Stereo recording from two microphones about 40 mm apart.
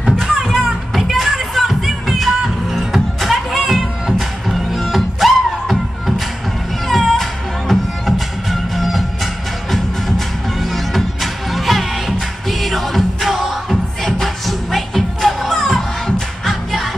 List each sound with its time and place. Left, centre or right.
0.0 s music: centre
0.7 s music: centre